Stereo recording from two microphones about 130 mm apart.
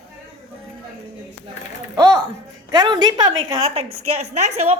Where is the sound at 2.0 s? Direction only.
30° right (ahead or behind).